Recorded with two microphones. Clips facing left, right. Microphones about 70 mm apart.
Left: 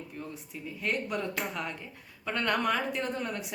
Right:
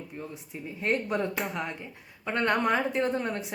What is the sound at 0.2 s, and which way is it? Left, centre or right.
A woman's voice, right.